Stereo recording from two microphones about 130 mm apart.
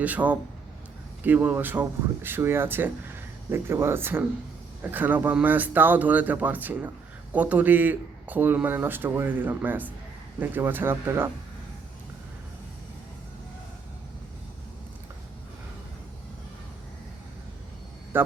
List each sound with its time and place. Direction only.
0.0 s a man's voice: 10° right (ahead or behind)